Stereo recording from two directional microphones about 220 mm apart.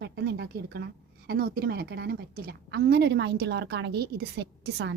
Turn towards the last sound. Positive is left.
turn(degrees=-50)  # may be behind; listen again after turning